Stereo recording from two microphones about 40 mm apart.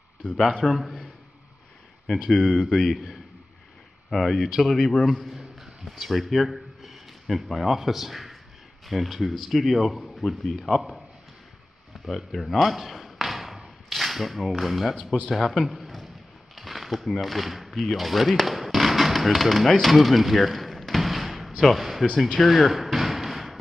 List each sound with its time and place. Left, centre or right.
0.5 s a man's voice: centre
0.7 s a man's voice: centre
2.3 s a man's voice: centre
4.1 s a man's voice: centre
12.3 s a sound: centre
13.8 s a man's voice: centre
16.5 s a sound: centre
17.7 s speech: centre
22.4 s slam: centre